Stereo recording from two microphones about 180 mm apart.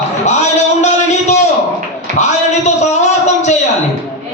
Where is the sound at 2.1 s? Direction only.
40° left (ahead or behind).